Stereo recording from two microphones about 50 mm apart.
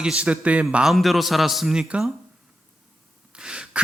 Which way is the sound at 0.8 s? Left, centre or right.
Centre.